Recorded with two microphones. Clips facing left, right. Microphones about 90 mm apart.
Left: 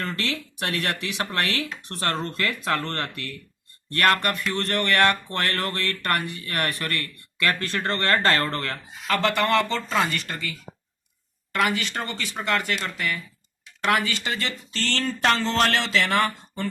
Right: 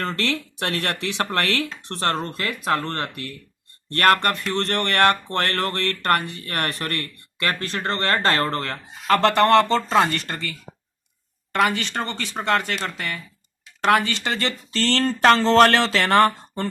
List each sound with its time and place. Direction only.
0.0 s speech: 40° right (ahead or behind)
1.2 s speech: 45° right (ahead or behind)
1.8 s speech: 30° right (ahead or behind)
3.9 s speech: 35° right (ahead or behind)
9.1 s speech: 40° right (ahead or behind)
11.5 s speech: 30° right (ahead or behind)